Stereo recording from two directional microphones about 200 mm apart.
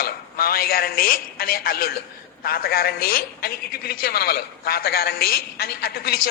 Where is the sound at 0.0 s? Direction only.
50° left (ahead or behind).